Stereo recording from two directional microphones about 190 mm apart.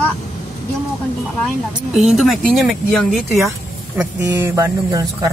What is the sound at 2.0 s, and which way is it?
Speech, centre (ahead or behind).